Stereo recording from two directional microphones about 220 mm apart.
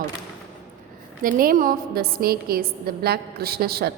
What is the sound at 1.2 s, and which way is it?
A woman's voice, 40° right (ahead or behind).